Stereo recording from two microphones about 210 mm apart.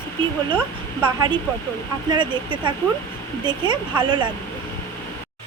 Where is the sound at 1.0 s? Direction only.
20° right (ahead or behind).